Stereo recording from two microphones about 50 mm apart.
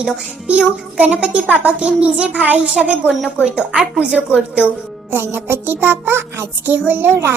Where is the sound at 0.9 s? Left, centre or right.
Right.